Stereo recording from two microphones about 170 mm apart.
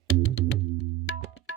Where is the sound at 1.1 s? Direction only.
90° left.